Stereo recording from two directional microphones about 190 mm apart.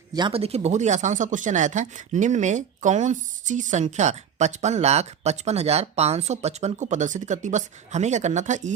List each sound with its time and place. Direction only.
0.1 s speech: 25° right (ahead or behind); by 8.7 s 40° right (ahead or behind)